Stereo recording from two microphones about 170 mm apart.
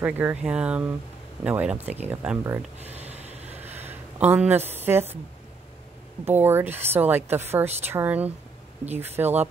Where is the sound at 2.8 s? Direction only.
40° right (ahead or behind).